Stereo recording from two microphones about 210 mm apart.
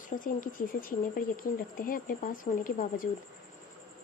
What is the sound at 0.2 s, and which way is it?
Speech, 40° left (ahead or behind).